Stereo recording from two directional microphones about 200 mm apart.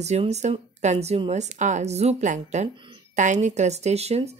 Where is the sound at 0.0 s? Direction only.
35° right (ahead or behind).